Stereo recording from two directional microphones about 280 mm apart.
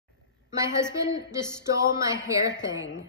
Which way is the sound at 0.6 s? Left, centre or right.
Centre.